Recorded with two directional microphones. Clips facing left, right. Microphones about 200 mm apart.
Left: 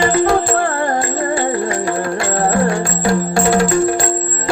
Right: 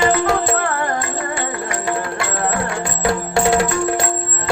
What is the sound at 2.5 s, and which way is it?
Music, 30° left (ahead or behind).